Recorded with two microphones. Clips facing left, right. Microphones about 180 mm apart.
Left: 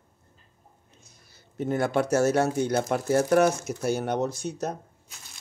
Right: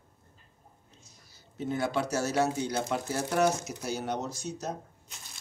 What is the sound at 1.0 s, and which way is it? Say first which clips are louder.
Speech: left 1 dB; 55° left (ahead or behind).